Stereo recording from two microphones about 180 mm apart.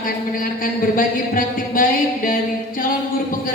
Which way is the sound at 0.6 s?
50° left (ahead or behind).